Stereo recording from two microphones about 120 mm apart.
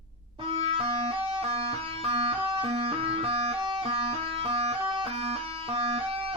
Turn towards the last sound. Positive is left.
turn(degrees=-50)  # may be behind; listen again after turning